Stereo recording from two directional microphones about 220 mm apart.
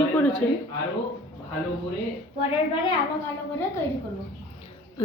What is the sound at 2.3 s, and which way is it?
Speech, 25° left (ahead or behind).